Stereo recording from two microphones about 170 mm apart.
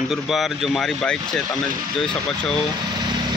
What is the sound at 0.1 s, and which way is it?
A man's voice, centre (ahead or behind).